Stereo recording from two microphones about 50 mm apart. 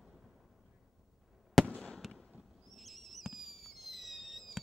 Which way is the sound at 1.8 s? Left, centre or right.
Centre.